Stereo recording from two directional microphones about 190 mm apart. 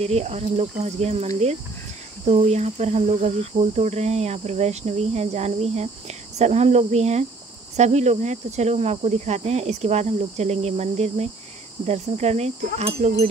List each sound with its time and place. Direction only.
0.0 s speech: 35° right (ahead or behind)